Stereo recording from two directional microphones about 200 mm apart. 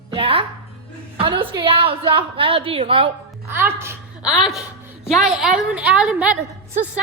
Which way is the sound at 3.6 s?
10° right (ahead or behind).